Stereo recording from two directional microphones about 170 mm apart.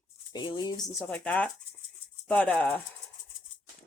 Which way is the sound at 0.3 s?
25° left (ahead or behind).